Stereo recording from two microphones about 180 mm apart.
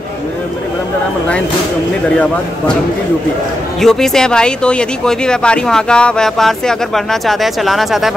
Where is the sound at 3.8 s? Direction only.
Centre (ahead or behind).